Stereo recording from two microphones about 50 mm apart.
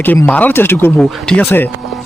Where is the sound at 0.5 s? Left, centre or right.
Left.